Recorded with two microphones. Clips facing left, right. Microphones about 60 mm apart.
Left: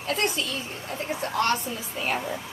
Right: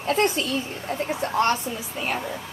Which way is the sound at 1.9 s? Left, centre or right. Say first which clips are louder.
Left 1 dB; centre.